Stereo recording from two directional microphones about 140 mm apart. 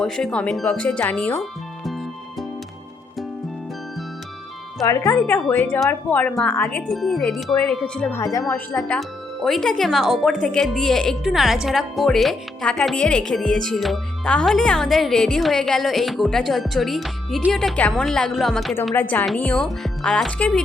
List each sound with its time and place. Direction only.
0.0 s speech: 5° left (ahead or behind)
4.8 s speech: 25° left (ahead or behind)
5.1 s speech: 5° left (ahead or behind)
8.1 s speech: 20° left (ahead or behind)
9.0 s speech: centre (ahead or behind)
18.9 s speech: 15° left (ahead or behind)